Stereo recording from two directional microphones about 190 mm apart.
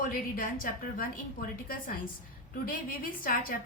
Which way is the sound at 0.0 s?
45° left (ahead or behind).